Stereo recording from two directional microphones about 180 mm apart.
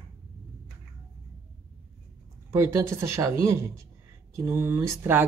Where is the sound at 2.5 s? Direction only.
15° right (ahead or behind).